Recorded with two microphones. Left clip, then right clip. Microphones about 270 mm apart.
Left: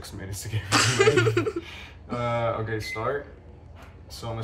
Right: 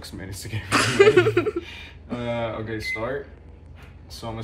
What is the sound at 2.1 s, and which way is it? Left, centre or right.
Speech, centre.